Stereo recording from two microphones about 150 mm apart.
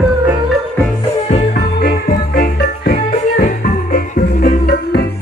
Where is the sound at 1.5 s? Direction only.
90° left.